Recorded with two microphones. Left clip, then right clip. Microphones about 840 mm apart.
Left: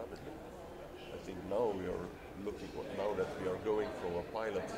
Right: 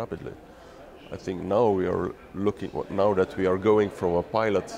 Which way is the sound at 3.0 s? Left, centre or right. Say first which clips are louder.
Right 14 dB; right.